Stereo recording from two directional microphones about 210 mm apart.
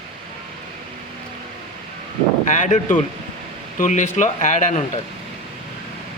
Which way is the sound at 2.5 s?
35° left (ahead or behind).